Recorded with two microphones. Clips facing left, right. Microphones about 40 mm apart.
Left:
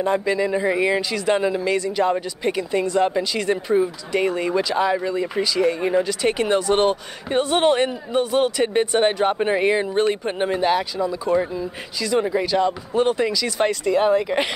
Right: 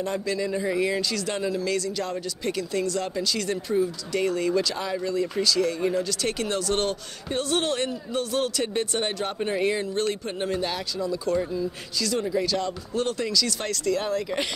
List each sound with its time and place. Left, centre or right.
0.0 s speech: left